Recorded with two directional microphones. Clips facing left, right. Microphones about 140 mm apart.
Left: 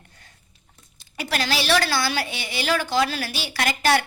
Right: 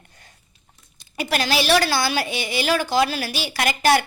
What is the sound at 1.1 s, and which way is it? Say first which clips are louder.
A woman's voice: right 3 dB; 15° right (ahead or behind).